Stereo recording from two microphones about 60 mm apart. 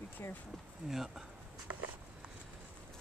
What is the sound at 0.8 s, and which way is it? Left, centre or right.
Speech, centre.